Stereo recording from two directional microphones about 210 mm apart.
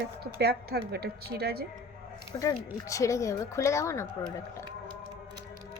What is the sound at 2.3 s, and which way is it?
A woman's voice, 20° left (ahead or behind).